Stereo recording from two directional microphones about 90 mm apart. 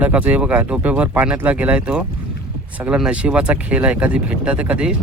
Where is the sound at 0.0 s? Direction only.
15° right (ahead or behind).